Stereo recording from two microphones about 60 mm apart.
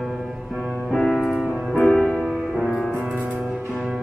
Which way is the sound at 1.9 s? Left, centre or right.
Left.